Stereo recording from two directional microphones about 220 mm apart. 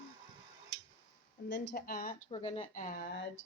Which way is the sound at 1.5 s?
45° left (ahead or behind).